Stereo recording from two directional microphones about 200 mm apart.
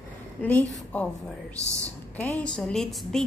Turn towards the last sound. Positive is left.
turn(degrees=0)  # may be behind; listen again after turning